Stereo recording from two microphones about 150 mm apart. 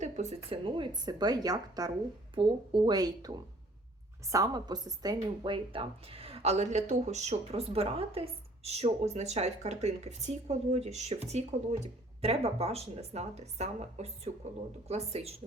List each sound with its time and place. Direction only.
0.0 s a woman's voice: 45° right (ahead or behind)